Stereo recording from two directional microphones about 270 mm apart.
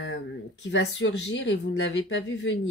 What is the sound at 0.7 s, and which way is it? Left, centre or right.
Speech, left.